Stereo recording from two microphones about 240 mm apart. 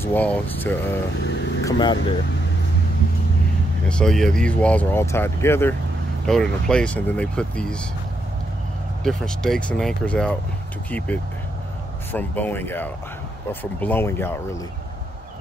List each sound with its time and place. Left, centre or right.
0.0 s speech: centre
1.6 s vehicle: centre
3.9 s speech: centre
9.0 s speech: centre